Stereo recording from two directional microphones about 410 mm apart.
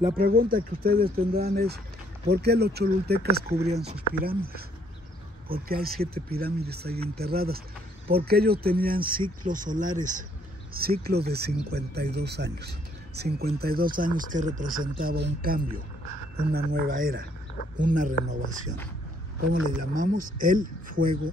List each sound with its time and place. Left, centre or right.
0.2 s speech: right